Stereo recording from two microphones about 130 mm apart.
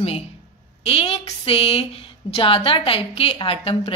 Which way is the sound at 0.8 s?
50° left (ahead or behind).